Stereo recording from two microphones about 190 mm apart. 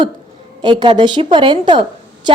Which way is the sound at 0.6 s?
25° right (ahead or behind).